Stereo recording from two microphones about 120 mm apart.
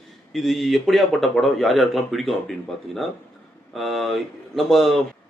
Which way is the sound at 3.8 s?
Centre (ahead or behind).